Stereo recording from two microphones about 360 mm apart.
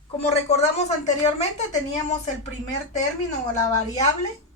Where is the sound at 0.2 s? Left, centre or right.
Centre.